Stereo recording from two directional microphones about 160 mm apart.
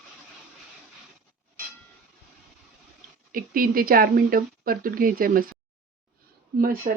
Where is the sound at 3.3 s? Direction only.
60° right (ahead or behind).